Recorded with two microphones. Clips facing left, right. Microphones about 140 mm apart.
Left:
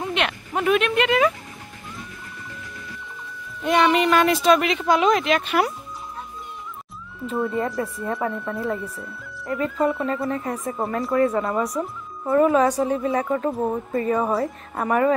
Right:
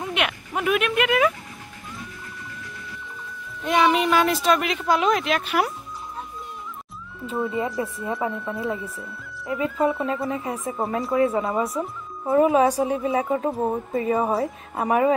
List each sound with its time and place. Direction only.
0.1 s a sound: 10° right (ahead or behind)
0.6 s a woman's voice: 5° right (ahead or behind)
3.6 s speech: centre (ahead or behind)
7.2 s speech: centre (ahead or behind)
12.3 s a woman's voice: 20° right (ahead or behind)
12.5 s a woman's voice: 10° right (ahead or behind)